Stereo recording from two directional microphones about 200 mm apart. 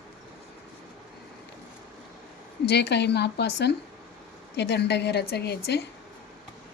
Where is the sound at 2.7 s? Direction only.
55° left (ahead or behind).